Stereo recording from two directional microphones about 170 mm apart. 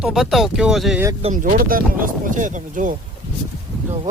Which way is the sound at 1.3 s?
55° right (ahead or behind).